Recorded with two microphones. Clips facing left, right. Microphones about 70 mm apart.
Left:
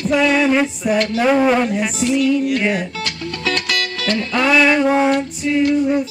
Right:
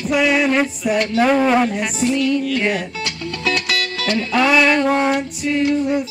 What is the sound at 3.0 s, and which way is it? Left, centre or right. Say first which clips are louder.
Music: even; centre.